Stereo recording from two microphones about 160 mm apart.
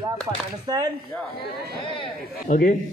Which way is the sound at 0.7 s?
25° right (ahead or behind).